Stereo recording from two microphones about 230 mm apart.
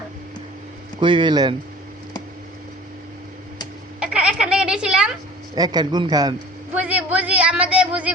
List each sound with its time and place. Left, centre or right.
0.9 s speech: right
4.0 s a sound: centre
5.5 s a man's voice: centre
6.7 s speech: centre